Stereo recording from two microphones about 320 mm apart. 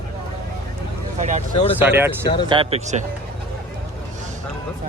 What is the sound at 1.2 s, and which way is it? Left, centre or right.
Speech, right.